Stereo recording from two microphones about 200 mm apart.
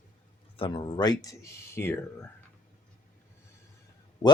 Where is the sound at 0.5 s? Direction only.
25° left (ahead or behind).